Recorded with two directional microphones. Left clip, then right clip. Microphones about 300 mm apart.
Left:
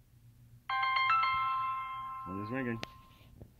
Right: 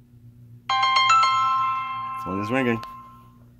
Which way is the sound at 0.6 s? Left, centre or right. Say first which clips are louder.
Right 11 dB; centre.